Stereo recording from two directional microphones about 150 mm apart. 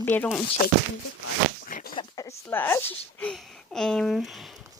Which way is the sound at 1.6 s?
75° left (ahead or behind).